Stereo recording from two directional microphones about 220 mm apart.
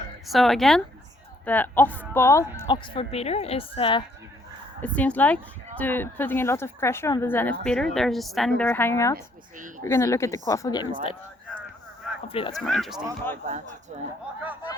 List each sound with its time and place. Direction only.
0.3 s a woman's voice: centre (ahead or behind)
2.7 s speech: 25° left (ahead or behind)
4.8 s a woman's voice: 5° left (ahead or behind)
9.1 s speech: 35° right (ahead or behind)
9.8 s speech: 15° left (ahead or behind)
12.3 s speech: 25° left (ahead or behind)
12.5 s a woman's voice: centre (ahead or behind)